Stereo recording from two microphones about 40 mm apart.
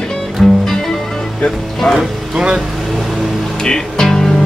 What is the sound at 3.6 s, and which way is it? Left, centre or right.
Music, centre.